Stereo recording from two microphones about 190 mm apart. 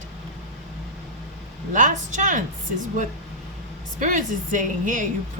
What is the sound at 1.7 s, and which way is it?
Speech, 40° right (ahead or behind).